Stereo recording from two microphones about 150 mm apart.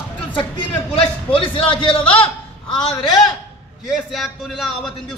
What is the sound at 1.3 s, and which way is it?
Speech, 35° left (ahead or behind).